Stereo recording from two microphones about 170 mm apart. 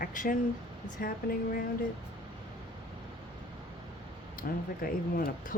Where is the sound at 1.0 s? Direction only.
55° left (ahead or behind).